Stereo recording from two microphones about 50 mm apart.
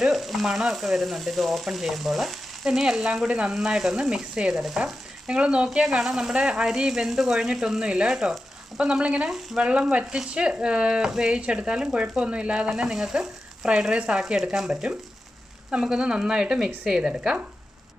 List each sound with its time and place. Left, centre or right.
0.0 s frying: centre
3.3 s speech: centre
5.4 s speech: right
5.7 s speech: centre
7.1 s frying: centre
7.3 s speech: centre